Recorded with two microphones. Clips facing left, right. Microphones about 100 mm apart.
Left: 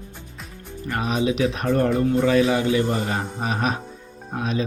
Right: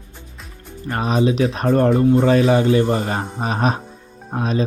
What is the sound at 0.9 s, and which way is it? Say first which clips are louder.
Speech: right 4 dB; 40° right (ahead or behind).